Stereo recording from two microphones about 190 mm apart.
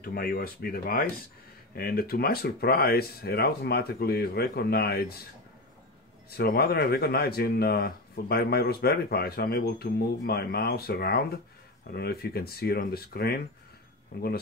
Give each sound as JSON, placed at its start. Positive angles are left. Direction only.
{"t": 0.0, "sound": "speech", "side_deg": 50}
{"t": 6.3, "sound": "speech", "side_deg": 55}